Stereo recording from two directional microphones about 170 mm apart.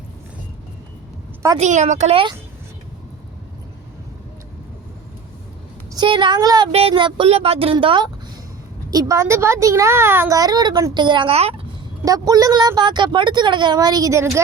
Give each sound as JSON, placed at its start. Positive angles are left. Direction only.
{"t": 1.5, "sound": "speech", "side_deg": -40}
{"t": 5.9, "sound": "speech", "side_deg": -25}
{"t": 6.7, "sound": "a woman's voice", "side_deg": -35}
{"t": 12.0, "sound": "a woman's voice", "side_deg": -20}